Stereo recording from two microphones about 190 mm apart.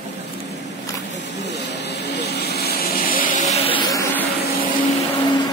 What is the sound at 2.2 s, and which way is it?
Vehicle, 60° left (ahead or behind).